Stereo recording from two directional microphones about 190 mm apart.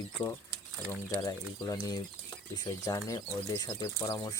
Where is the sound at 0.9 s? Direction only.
15° left (ahead or behind).